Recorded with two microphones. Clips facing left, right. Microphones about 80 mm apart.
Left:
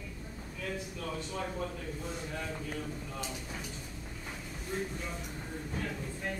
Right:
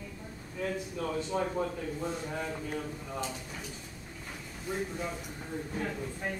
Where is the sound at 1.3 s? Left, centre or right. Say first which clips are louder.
Right 7 dB; right.